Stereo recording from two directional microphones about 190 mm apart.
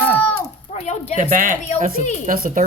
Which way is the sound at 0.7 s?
35° left (ahead or behind).